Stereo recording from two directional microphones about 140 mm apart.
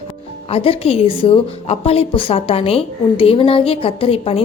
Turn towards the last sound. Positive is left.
turn(degrees=45)  # may be behind; listen again after turning